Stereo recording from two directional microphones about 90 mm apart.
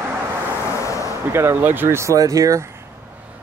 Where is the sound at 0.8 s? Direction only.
35° left (ahead or behind).